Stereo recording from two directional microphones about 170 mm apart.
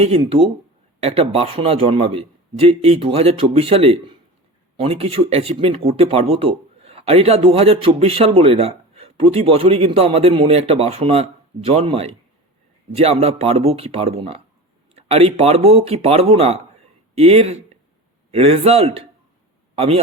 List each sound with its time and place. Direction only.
0.0 s speech: 35° right (ahead or behind)